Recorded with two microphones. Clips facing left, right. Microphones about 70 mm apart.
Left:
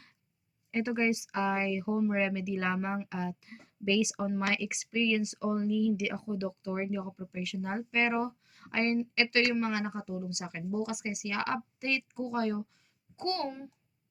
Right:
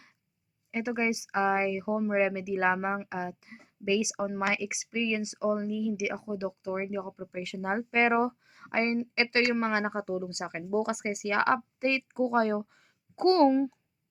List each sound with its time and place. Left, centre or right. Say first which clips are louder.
0.7 s speech: even; centre
7.1 s speech: right 1 dB; right